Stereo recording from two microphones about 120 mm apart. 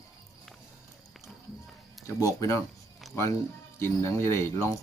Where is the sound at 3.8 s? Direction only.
25° left (ahead or behind).